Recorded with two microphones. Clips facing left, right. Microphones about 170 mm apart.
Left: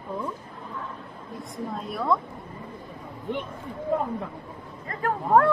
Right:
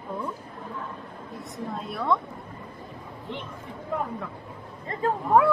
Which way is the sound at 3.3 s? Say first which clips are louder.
Left 6 dB; 50° left (ahead or behind).